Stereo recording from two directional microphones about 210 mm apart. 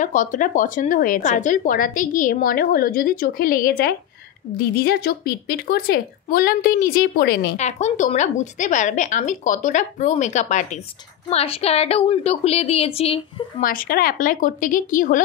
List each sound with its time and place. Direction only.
0.0 s a woman's voice: 35° left (ahead or behind)
7.5 s a woman's voice: 35° left (ahead or behind)
13.6 s a woman's voice: 40° left (ahead or behind)